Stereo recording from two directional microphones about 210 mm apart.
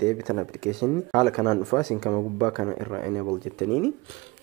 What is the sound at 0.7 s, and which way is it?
Speech, 15° left (ahead or behind).